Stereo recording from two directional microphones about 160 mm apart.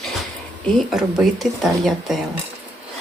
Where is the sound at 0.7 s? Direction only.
Centre (ahead or behind).